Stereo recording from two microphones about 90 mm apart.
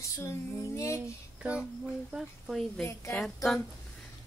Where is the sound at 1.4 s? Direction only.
15° right (ahead or behind).